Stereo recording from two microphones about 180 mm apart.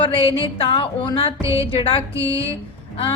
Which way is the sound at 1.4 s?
15° right (ahead or behind).